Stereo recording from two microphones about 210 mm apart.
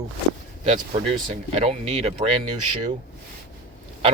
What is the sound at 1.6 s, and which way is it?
Speech, 30° right (ahead or behind).